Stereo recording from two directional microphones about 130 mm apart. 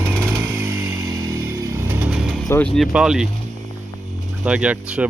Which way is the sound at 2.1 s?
5° right (ahead or behind).